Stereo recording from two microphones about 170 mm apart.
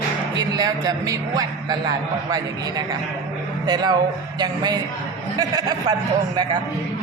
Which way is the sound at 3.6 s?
25° right (ahead or behind).